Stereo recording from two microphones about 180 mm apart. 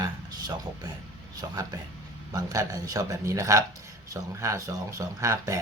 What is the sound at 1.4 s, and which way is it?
Speech, 20° right (ahead or behind).